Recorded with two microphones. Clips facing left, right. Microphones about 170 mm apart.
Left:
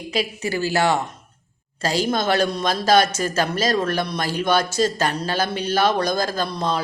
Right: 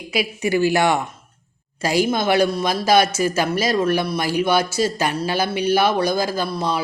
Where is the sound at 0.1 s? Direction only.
15° right (ahead or behind).